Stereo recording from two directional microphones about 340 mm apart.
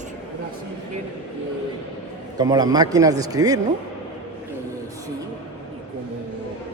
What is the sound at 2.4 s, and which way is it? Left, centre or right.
A man's voice, centre.